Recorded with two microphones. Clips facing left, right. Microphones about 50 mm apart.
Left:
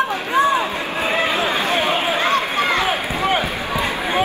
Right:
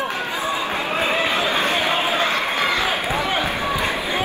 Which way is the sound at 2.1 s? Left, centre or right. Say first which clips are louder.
Left 2 dB; left.